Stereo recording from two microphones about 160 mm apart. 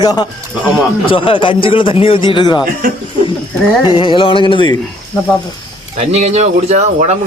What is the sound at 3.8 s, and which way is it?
Speech, 30° left (ahead or behind).